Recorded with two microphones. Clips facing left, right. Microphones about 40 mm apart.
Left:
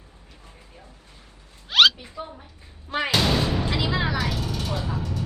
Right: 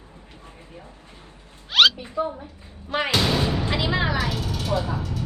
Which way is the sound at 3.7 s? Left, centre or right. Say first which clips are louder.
Right 2 dB; right.